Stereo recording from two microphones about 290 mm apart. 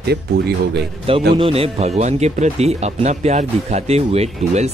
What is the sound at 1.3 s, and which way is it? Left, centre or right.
Speech, centre.